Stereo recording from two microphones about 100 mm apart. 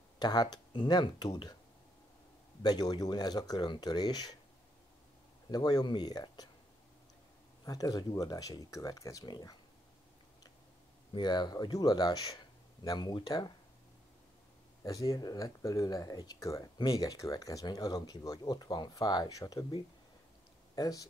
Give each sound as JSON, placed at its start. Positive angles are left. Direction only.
{"t": 0.2, "sound": "speech", "side_deg": 45}
{"t": 2.6, "sound": "speech", "side_deg": 45}
{"t": 5.5, "sound": "speech", "side_deg": 45}
{"t": 7.6, "sound": "speech", "side_deg": 40}
{"t": 11.1, "sound": "speech", "side_deg": 45}
{"t": 14.8, "sound": "speech", "side_deg": 35}
{"t": 16.7, "sound": "speech", "side_deg": 55}
{"t": 17.0, "sound": "speech", "side_deg": 35}
{"t": 20.7, "sound": "speech", "side_deg": 40}